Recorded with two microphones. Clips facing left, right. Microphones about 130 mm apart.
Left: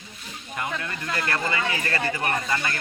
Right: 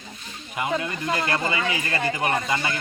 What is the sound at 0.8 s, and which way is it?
Speech, 15° right (ahead or behind).